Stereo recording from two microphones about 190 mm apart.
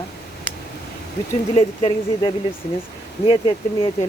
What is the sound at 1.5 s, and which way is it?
Speech, 30° left (ahead or behind).